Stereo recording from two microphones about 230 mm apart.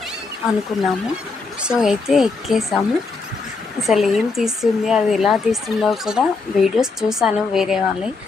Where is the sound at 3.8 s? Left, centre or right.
Centre.